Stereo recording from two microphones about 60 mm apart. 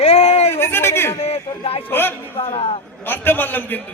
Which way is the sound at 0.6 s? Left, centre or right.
Left.